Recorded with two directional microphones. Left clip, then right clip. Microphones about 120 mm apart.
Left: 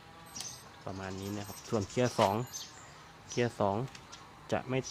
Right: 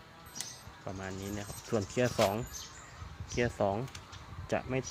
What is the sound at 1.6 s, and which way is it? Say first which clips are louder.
Speech: even; 10° left (ahead or behind).